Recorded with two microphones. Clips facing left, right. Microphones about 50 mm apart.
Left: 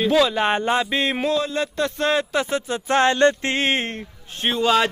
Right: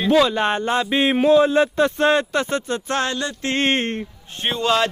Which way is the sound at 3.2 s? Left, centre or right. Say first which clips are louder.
Left 8 dB; left.